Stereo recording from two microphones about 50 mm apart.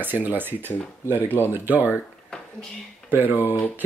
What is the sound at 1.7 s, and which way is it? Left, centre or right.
Speech, right.